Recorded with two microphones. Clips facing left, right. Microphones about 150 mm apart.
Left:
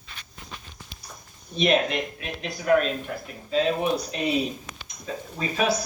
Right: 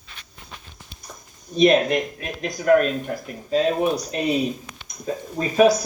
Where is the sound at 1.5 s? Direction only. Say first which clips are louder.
Right 6 dB; 40° right (ahead or behind).